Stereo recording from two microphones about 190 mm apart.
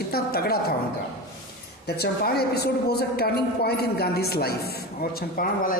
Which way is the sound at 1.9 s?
55° left (ahead or behind).